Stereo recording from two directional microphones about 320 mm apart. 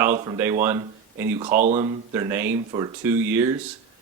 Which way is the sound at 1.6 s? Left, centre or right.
Right.